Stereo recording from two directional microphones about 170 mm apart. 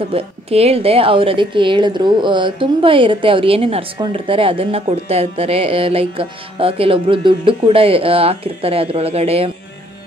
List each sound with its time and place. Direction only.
0.1 s a woman's voice: 35° right (ahead or behind)